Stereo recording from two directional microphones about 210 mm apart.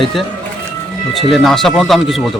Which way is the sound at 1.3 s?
Centre (ahead or behind).